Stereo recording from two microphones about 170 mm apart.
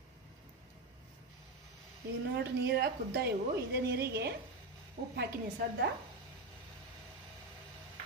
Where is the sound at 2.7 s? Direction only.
70° right (ahead or behind).